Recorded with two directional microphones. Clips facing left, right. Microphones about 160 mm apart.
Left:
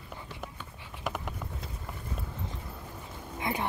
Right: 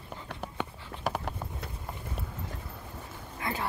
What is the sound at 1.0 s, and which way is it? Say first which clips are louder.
Clip-clop: right 3 dB; 35° right (ahead or behind).